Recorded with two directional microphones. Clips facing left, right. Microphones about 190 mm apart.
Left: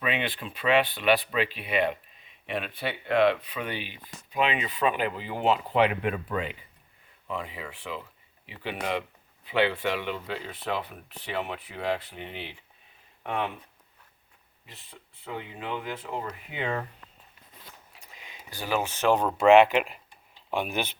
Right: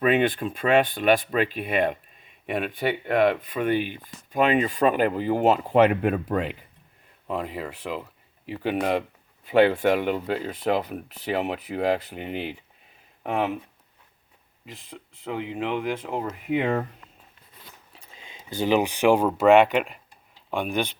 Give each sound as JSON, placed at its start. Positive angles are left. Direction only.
{"t": 0.0, "sound": "speech", "side_deg": -45}
{"t": 16.0, "sound": "speech", "side_deg": -50}
{"t": 17.9, "sound": "speech", "side_deg": -30}